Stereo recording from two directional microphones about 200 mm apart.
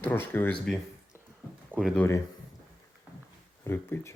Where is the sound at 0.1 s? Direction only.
10° left (ahead or behind).